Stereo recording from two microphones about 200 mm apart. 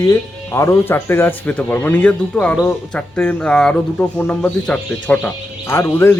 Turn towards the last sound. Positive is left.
turn(degrees=10)  # may be behind; listen again after turning